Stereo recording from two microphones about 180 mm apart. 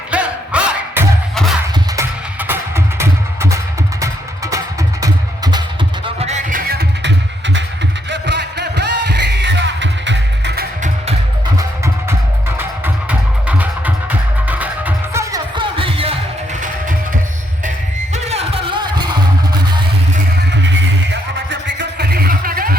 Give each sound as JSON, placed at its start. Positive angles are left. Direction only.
{"t": 0.1, "sound": "music", "side_deg": -5}
{"t": 6.1, "sound": "music", "side_deg": -40}
{"t": 8.1, "sound": "music", "side_deg": -75}
{"t": 12.0, "sound": "music", "side_deg": -10}
{"t": 18.1, "sound": "music", "side_deg": -35}
{"t": 21.5, "sound": "music", "side_deg": -75}